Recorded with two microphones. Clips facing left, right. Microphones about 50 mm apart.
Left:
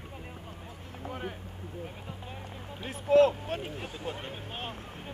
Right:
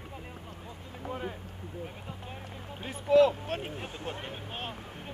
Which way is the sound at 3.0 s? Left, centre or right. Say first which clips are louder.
Even; left.